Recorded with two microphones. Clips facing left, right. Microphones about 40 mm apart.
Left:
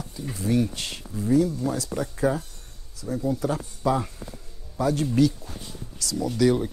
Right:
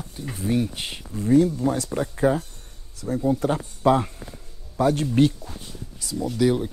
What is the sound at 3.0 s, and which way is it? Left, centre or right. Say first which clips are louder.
Speech: right 3 dB; right.